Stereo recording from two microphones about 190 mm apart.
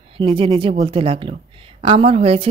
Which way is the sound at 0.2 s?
25° right (ahead or behind).